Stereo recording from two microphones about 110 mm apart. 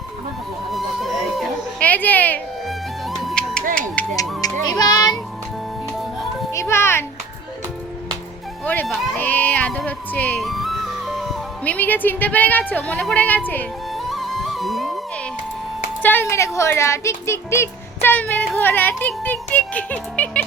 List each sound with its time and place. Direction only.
0.7 s a sound: centre (ahead or behind)
1.8 s a sound: 15° left (ahead or behind)
4.4 s music: 35° left (ahead or behind)
6.5 s music: 25° left (ahead or behind)
8.6 s speech: 15° left (ahead or behind)
10.4 s music: centre (ahead or behind)
11.6 s speech: 15° left (ahead or behind)
13.9 s music: centre (ahead or behind)
16.0 s speech: 15° left (ahead or behind)